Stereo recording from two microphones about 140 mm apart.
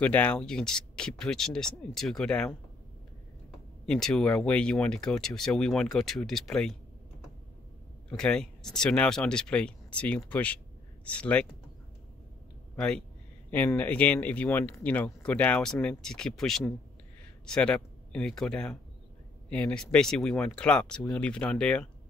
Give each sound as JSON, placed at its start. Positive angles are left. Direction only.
{"t": 0.0, "sound": "speech", "side_deg": 10}
{"t": 3.8, "sound": "speech", "side_deg": 5}
{"t": 8.1, "sound": "speech", "side_deg": 5}
{"t": 12.7, "sound": "speech", "side_deg": 5}